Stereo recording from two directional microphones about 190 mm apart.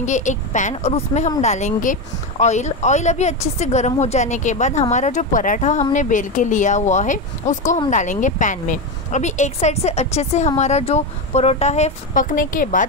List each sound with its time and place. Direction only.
0.0 s a woman's voice: 40° left (ahead or behind)